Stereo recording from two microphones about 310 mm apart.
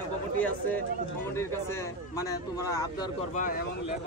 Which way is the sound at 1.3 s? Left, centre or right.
Centre.